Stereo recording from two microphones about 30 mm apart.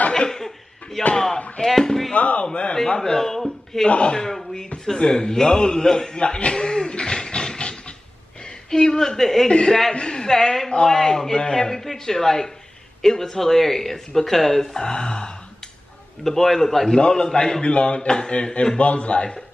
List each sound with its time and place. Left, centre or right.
1.1 s chop: centre
1.6 s speech: centre
2.1 s speech: left
2.4 s a man's voice: left
3.0 s a man's voice: centre
3.8 s a man's voice: left
4.2 s a man's voice: centre
6.1 s a sound: left
8.6 s speech: left
9.9 s a man's voice: left
16.3 s speech: centre
16.9 s a man's voice: left